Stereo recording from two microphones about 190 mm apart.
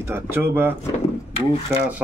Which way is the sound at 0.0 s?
10° right (ahead or behind).